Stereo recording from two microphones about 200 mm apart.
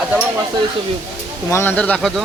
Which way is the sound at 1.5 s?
10° left (ahead or behind).